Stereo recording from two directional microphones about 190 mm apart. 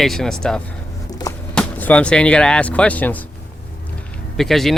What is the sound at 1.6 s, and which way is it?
Speech, 10° left (ahead or behind).